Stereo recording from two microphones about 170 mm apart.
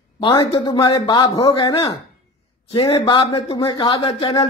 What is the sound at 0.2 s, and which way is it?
A man's voice, 30° left (ahead or behind).